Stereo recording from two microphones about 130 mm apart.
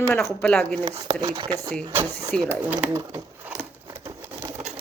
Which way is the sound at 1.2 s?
40° right (ahead or behind).